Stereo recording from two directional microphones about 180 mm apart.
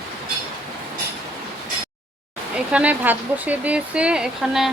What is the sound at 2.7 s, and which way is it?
Speech, 10° right (ahead or behind).